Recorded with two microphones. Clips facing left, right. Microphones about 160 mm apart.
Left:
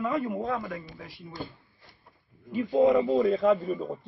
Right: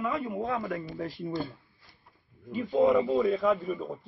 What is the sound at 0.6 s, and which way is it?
Speech, 40° right (ahead or behind).